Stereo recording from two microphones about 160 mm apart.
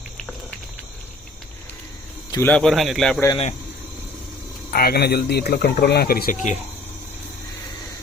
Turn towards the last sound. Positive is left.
turn(degrees=50)  # may be behind; listen again after turning